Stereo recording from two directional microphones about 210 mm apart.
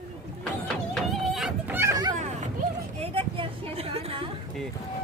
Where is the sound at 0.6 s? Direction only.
Centre (ahead or behind); by 2.1 s 15° right (ahead or behind).